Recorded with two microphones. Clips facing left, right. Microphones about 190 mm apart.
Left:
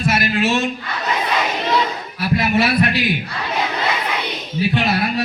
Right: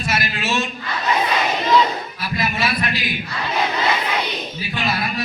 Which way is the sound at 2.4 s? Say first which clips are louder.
Left 5 dB; 65° left (ahead or behind).